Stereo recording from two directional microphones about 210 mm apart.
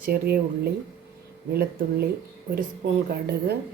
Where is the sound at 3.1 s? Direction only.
50° right (ahead or behind).